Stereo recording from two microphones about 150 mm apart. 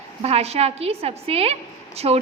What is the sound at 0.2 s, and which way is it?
A woman's voice, 45° right (ahead or behind).